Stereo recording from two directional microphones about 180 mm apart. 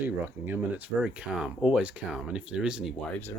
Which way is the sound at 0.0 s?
10° right (ahead or behind).